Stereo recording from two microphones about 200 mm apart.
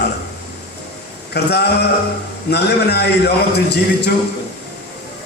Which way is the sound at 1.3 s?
55° left (ahead or behind).